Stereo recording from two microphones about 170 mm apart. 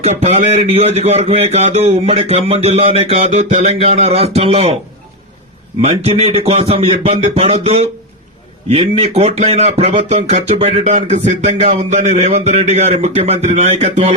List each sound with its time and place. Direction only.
0.0 s speech: 40° right (ahead or behind)
5.8 s speech: 35° right (ahead or behind)